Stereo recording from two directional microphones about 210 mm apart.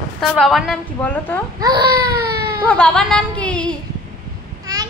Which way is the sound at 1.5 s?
20° right (ahead or behind).